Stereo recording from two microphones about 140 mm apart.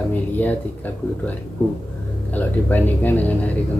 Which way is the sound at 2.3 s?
10° left (ahead or behind).